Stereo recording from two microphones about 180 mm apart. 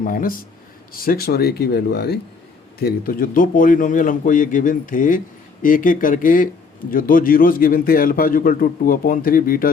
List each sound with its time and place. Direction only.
0.0 s a man's voice: 50° left (ahead or behind)